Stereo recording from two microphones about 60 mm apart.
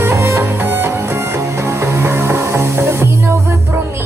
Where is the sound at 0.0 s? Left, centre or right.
Right.